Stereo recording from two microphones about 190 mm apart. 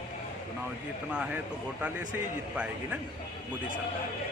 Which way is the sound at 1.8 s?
10° right (ahead or behind).